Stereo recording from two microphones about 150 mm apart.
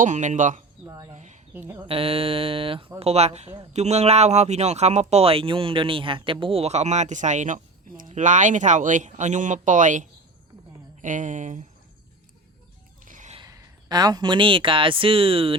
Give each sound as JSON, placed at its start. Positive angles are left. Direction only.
{"t": 0.0, "sound": "speech", "side_deg": -55}
{"t": 1.1, "sound": "a sound", "side_deg": -50}
{"t": 1.5, "sound": "speech", "side_deg": -15}
{"t": 1.8, "sound": "speech", "side_deg": -40}
{"t": 13.1, "sound": "a sound", "side_deg": -60}
{"t": 13.4, "sound": "speech", "side_deg": -25}